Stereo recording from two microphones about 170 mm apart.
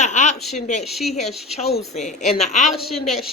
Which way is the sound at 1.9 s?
40° left (ahead or behind).